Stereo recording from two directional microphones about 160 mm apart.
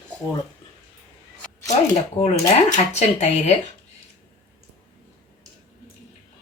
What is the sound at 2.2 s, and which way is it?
Speech, 45° left (ahead or behind).